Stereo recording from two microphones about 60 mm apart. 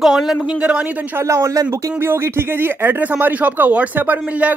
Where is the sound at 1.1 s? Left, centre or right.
Right.